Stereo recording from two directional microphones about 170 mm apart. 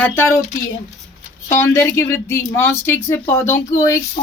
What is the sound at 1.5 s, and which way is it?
Speech, 15° left (ahead or behind).